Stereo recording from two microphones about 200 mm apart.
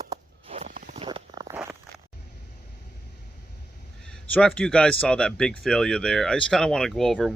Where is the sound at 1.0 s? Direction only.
20° right (ahead or behind).